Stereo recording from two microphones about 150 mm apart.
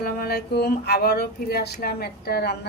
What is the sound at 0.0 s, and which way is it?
Speech, 90° left.